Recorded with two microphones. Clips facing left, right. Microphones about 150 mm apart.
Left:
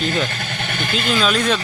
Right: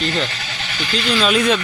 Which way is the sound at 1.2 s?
Centre (ahead or behind).